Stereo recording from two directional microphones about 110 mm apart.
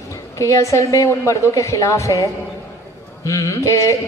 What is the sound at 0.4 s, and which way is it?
A man's voice, 30° left (ahead or behind).